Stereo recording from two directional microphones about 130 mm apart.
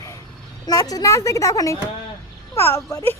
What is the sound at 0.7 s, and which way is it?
A woman's voice, 30° left (ahead or behind).